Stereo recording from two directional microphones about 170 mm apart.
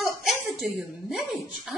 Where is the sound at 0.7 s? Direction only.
Centre (ahead or behind).